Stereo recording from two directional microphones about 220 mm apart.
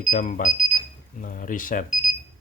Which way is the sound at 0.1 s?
35° left (ahead or behind).